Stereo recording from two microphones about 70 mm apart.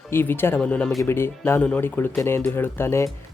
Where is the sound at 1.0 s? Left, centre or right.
Left.